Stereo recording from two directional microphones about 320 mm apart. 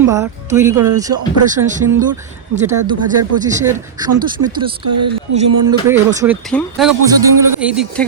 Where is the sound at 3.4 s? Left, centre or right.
Centre.